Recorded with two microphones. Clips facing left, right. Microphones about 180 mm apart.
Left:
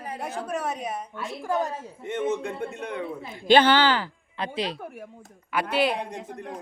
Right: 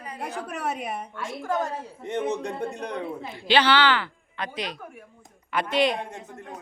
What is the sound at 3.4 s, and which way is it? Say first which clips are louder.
A woman's voice: left 3 dB; 50° left (ahead or behind).